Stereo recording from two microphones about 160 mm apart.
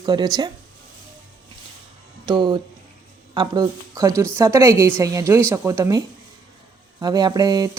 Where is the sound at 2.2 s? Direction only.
30° right (ahead or behind).